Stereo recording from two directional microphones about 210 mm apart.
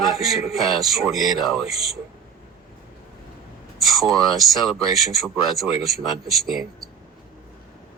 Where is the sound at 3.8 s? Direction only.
Centre (ahead or behind).